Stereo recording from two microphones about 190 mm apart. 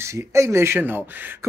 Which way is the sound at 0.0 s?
15° right (ahead or behind).